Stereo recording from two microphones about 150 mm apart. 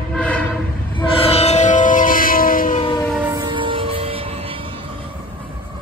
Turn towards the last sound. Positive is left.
turn(degrees=-40)  # may be behind; listen again after turning